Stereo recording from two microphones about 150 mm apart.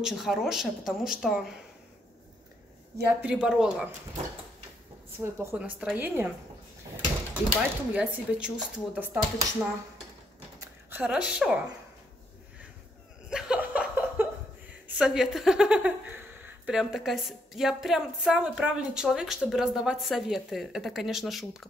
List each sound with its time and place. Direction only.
0.0 s a woman's voice: centre (ahead or behind)
3.2 s speech: 5° right (ahead or behind)
5.2 s speech: 15° right (ahead or behind)
5.6 s speech: 5° right (ahead or behind)
7.9 s a woman's voice: 5° right (ahead or behind)
13.3 s chuckle: 5° right (ahead or behind)
15.0 s a woman's voice: 5° right (ahead or behind)